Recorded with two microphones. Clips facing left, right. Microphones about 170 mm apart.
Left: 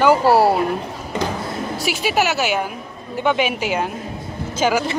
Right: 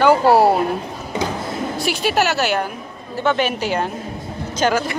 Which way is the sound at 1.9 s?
10° left (ahead or behind).